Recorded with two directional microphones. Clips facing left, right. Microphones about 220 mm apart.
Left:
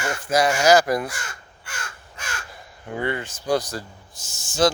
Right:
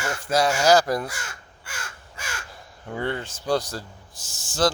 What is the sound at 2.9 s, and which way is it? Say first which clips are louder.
Speech: left 2 dB; 10° left (ahead or behind).